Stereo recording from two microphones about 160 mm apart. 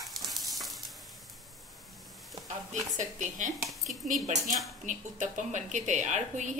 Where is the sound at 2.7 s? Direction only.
50° right (ahead or behind).